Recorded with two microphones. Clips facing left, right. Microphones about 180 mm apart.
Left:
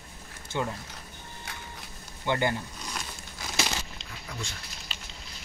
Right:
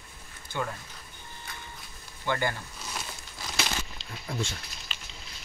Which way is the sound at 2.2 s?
20° left (ahead or behind).